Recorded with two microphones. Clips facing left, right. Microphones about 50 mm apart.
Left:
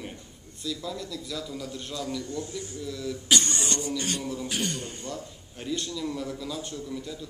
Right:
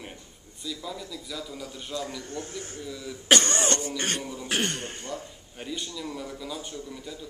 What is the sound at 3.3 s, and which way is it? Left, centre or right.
Cough, right.